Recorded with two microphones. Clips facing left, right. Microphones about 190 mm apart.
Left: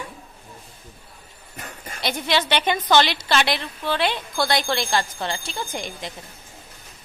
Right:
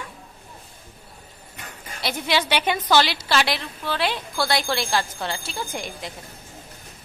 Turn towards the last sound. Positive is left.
turn(degrees=-5)  # may be behind; listen again after turning